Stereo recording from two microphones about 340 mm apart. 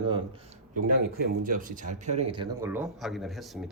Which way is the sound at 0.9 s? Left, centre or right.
Right.